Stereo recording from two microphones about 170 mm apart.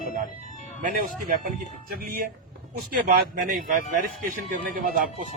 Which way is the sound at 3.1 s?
60° right (ahead or behind).